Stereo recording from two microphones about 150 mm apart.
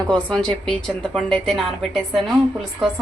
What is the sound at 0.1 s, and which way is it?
A woman's voice, 5° left (ahead or behind).